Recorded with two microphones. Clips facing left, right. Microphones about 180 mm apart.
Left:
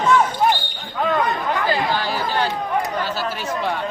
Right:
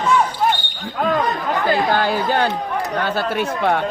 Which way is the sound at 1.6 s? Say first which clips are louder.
Right 7 dB; 55° right (ahead or behind).